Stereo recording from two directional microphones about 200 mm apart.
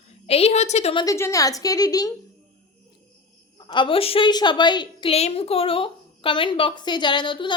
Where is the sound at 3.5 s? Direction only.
25° left (ahead or behind).